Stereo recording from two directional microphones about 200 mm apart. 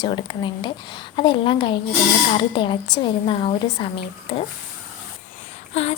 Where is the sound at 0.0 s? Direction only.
25° left (ahead or behind).